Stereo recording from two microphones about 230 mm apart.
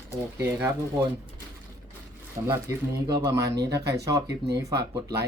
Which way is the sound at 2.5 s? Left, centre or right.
Centre.